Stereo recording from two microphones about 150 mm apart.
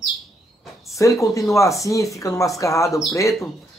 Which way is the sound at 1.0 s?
20° left (ahead or behind).